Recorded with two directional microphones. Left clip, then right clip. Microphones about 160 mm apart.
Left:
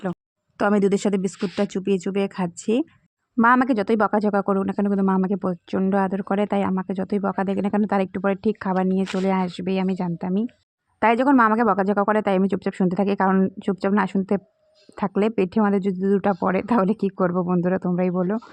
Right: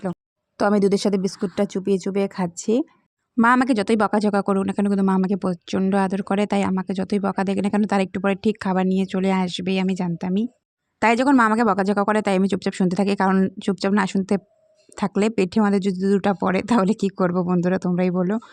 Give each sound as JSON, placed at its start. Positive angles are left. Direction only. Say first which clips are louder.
{"t": 0.6, "sound": "speech", "louder": "right 1 dB", "side_deg": -10}
{"t": 3.3, "sound": "speech", "louder": "even", "side_deg": -40}